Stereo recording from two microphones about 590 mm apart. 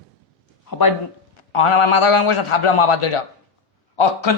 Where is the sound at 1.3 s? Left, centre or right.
Left.